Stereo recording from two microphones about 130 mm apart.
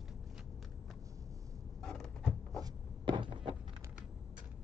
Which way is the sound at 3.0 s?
40° right (ahead or behind).